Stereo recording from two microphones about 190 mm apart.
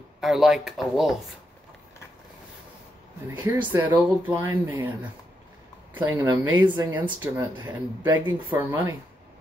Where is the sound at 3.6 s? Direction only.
10° right (ahead or behind).